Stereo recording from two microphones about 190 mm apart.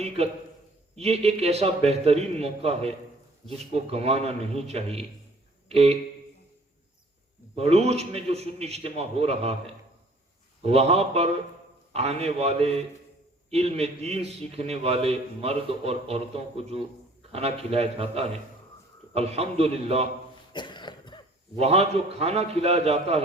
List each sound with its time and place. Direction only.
0.2 s a man's voice: 35° right (ahead or behind)
5.6 s a sound: 35° right (ahead or behind)
7.5 s a man's voice: 35° right (ahead or behind)
20.5 s cough: 25° left (ahead or behind)
21.6 s a man's voice: 30° right (ahead or behind)